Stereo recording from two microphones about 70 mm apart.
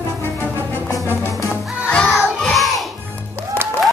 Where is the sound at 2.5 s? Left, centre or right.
Centre.